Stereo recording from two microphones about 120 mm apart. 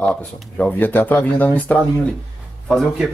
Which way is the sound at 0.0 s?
5° left (ahead or behind).